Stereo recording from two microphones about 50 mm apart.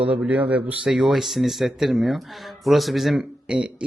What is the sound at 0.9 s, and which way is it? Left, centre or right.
Speech, centre.